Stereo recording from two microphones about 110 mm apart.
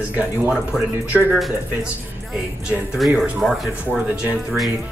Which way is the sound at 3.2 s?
Centre (ahead or behind).